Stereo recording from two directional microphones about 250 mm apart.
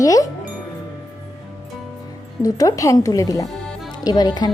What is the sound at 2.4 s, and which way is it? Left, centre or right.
Speech, centre.